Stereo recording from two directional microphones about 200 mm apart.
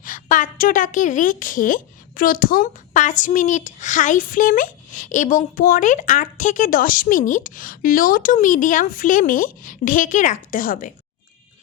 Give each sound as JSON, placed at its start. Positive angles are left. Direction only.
{"t": 0.0, "sound": "a woman's voice", "side_deg": 40}